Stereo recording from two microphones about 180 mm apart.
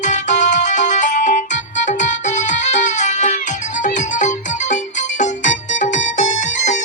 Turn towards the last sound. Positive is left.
turn(degrees=40)  # may be behind; listen again after turning